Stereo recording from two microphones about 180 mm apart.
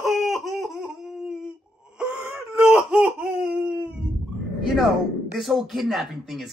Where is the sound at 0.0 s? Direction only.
Centre (ahead or behind).